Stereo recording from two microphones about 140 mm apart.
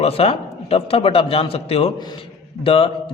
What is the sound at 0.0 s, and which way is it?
A man's voice, 45° left (ahead or behind).